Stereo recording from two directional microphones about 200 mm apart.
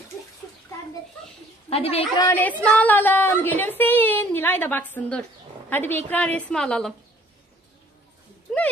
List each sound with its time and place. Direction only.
1.7 s a woman's voice: 30° left (ahead or behind)
2.2 s a woman's voice: 10° left (ahead or behind)